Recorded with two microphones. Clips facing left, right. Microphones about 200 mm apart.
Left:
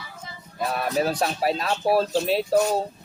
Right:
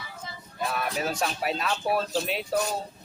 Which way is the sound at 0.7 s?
40° left (ahead or behind).